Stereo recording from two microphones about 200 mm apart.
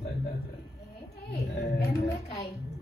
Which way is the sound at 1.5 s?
50° left (ahead or behind).